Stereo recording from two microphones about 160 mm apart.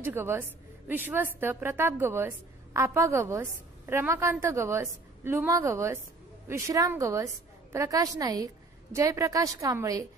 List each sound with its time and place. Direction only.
0.0 s a woman's voice: 15° right (ahead or behind)